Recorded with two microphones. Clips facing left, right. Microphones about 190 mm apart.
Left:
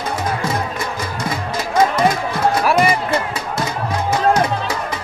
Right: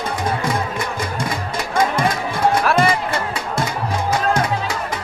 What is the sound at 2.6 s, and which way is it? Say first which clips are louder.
Music: left 3 dB; 10° left (ahead or behind).